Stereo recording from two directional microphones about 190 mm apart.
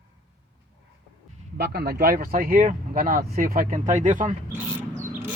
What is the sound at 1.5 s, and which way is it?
Speech, 60° right (ahead or behind).